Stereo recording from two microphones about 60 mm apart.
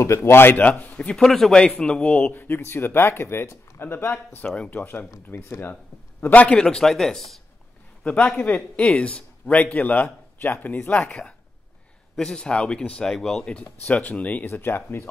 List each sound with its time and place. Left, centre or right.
0.0 s speech: left
1.1 s speech: centre
2.3 s speech: left
4.4 s speech: centre; by 5.8 s left
6.2 s speech: left
6.5 s speech: centre
8.0 s a man's voice: left
11.1 s speech: centre
13.4 s speech: centre
14.5 s speech: left